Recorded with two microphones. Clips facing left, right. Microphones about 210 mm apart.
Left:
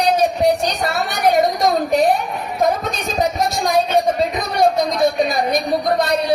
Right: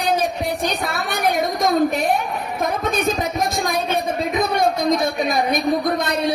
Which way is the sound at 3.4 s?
55° right (ahead or behind).